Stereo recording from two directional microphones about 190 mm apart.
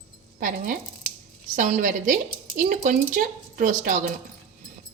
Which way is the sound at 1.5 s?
40° right (ahead or behind).